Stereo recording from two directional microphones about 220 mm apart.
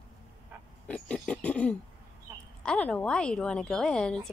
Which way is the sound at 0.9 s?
5° left (ahead or behind).